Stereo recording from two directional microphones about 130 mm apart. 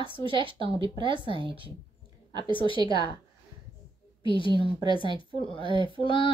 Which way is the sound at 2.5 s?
40° left (ahead or behind).